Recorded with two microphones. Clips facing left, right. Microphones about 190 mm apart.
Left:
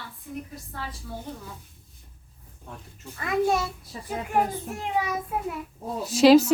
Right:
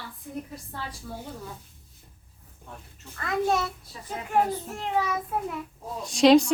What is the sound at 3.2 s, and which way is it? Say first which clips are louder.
Speech: left 2 dB; 10° left (ahead or behind).